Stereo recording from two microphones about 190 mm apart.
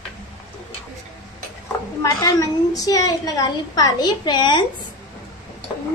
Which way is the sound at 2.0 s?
15° left (ahead or behind).